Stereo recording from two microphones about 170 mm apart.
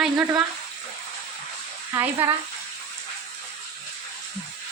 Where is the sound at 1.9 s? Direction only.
15° right (ahead or behind).